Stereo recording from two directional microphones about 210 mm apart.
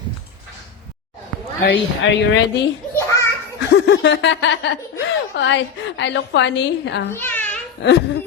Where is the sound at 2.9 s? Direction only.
15° left (ahead or behind).